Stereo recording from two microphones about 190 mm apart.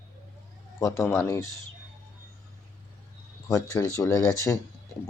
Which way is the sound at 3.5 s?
15° left (ahead or behind).